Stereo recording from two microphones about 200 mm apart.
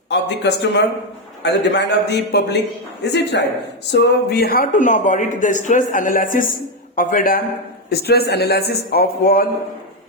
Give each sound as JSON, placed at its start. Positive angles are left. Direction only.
{"t": 0.1, "sound": "a man's voice", "side_deg": 60}